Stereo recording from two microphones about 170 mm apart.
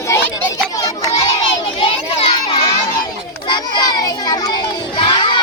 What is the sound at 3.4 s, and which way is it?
Child singing, 25° left (ahead or behind).